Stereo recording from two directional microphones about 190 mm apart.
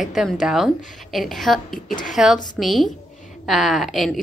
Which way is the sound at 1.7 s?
45° left (ahead or behind).